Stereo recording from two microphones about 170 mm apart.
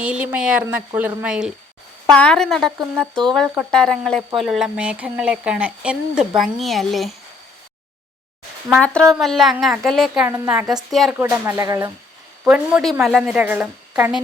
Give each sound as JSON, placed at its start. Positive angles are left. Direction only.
{"t": 0.0, "sound": "speech", "side_deg": -10}
{"t": 2.0, "sound": "speech", "side_deg": 5}
{"t": 8.7, "sound": "speech", "side_deg": 5}
{"t": 10.2, "sound": "speech", "side_deg": -15}
{"t": 10.5, "sound": "speech", "side_deg": -5}
{"t": 12.5, "sound": "speech", "side_deg": -5}